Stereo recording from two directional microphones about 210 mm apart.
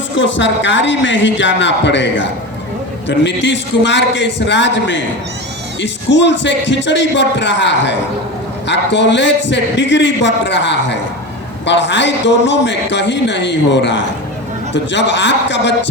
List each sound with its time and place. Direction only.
0.2 s a man's voice: 60° left (ahead or behind)